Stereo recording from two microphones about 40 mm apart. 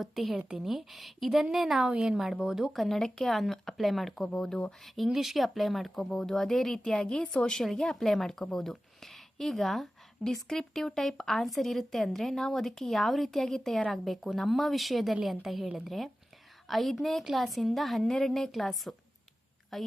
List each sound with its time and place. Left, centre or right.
0.0 s speech: centre
1.9 s speech: centre
2.7 s a woman's voice: centre
5.0 s speech: centre
7.0 s a woman's voice: centre
7.5 s a woman's voice: centre